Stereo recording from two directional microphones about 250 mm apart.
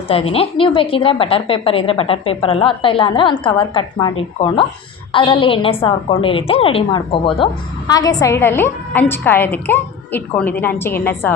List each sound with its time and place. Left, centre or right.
0.1 s a woman's voice: left